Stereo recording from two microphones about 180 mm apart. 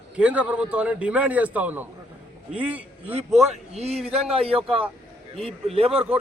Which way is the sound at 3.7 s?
35° right (ahead or behind).